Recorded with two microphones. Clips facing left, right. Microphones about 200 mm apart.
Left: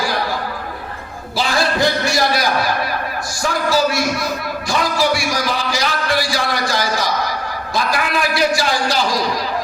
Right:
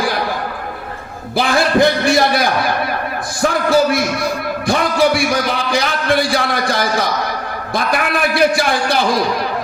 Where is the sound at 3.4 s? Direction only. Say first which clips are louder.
Right 4 dB; 55° right (ahead or behind).